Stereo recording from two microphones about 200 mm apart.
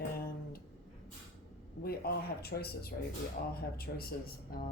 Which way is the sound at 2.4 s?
50° left (ahead or behind).